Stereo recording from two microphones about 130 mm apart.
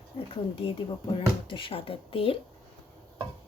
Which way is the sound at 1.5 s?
40° left (ahead or behind).